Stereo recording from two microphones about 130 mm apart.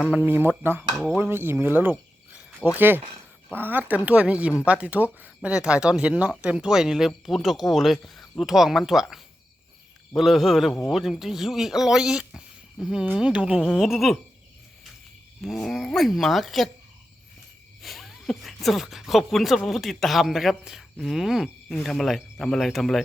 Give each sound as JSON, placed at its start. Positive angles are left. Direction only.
{"t": 0.0, "sound": "speech", "side_deg": -10}
{"t": 1.1, "sound": "cricket", "side_deg": -15}
{"t": 2.7, "sound": "speech", "side_deg": -15}
{"t": 15.4, "sound": "speech", "side_deg": 0}
{"t": 17.8, "sound": "speech", "side_deg": 0}